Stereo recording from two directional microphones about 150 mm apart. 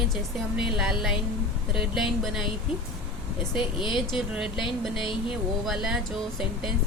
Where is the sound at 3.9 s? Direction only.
Centre (ahead or behind).